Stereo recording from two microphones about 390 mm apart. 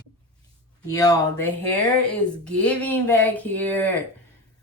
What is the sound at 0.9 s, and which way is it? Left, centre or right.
Speech, centre.